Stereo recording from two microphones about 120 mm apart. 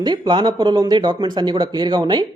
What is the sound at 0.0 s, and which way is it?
Speech, 35° right (ahead or behind).